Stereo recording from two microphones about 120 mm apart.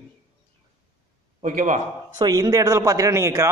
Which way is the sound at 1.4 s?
90° right.